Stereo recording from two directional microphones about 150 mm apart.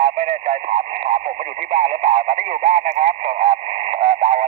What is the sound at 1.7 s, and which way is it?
Speech, 40° right (ahead or behind).